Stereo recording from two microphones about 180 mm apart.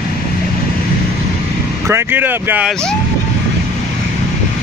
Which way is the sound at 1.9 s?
15° right (ahead or behind).